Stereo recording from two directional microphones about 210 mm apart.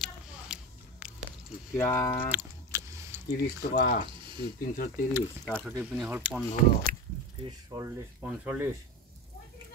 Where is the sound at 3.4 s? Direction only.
50° left (ahead or behind).